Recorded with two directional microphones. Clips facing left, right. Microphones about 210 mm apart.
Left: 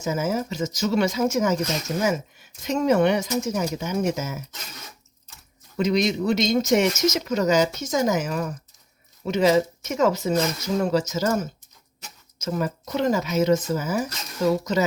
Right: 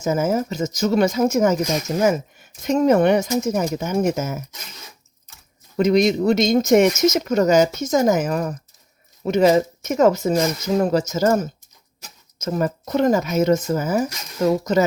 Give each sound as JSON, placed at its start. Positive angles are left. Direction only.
{"t": 0.0, "sound": "speech", "side_deg": -50}
{"t": 5.7, "sound": "speech", "side_deg": -50}
{"t": 12.4, "sound": "speech", "side_deg": -45}